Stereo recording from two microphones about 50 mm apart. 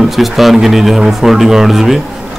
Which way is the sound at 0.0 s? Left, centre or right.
Centre.